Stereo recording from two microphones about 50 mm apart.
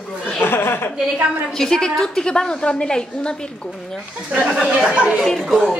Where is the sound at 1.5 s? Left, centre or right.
Centre.